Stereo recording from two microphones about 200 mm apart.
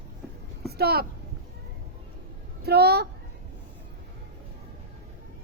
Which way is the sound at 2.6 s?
55° right (ahead or behind).